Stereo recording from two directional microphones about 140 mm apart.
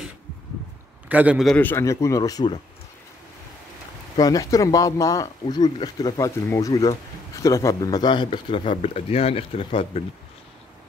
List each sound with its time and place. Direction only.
1.0 s a man's voice: 10° right (ahead or behind)
1.4 s a man's voice: 5° left (ahead or behind)
1.7 s speech: 20° left (ahead or behind)
4.2 s speech: 25° left (ahead or behind)